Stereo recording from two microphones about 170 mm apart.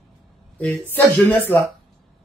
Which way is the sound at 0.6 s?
10° left (ahead or behind).